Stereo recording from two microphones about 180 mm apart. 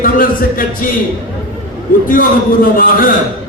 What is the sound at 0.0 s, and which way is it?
Speech, 50° left (ahead or behind).